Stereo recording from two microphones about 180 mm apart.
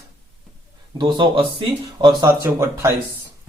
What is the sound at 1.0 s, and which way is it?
Speech, 25° right (ahead or behind).